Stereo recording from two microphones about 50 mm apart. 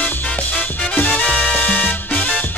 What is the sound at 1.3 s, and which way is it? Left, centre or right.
Music, left.